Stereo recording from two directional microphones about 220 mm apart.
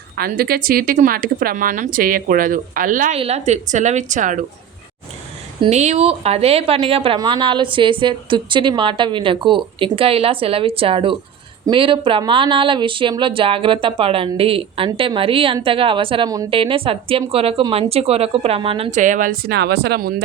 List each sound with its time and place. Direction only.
0.2 s speech: 45° right (ahead or behind)
5.5 s a woman's voice: 25° right (ahead or behind); by 20.2 s 45° right (ahead or behind)